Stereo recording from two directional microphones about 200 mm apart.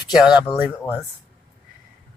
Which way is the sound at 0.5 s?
10° right (ahead or behind).